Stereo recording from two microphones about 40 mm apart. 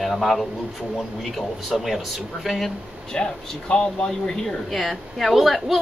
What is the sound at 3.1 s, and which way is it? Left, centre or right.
Speech, centre.